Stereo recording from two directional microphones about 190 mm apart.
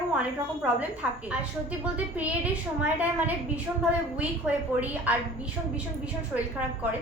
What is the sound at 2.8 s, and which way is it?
A woman's voice, 5° right (ahead or behind).